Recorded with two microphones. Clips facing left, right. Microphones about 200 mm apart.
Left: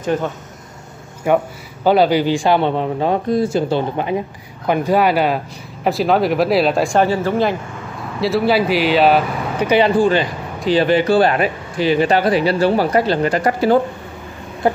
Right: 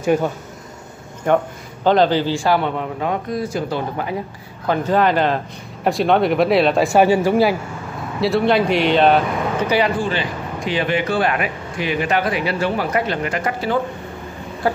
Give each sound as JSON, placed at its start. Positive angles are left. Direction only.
{"t": 0.0, "sound": "speech", "side_deg": -10}
{"t": 1.3, "sound": "a man's voice", "side_deg": 10}
{"t": 4.6, "sound": "speech", "side_deg": 10}
{"t": 7.0, "sound": "a man's voice", "side_deg": -15}
{"t": 8.2, "sound": "speech", "side_deg": 0}
{"t": 9.7, "sound": "a man's voice", "side_deg": 25}